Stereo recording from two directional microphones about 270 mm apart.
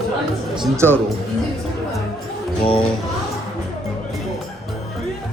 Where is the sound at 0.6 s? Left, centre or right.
Centre.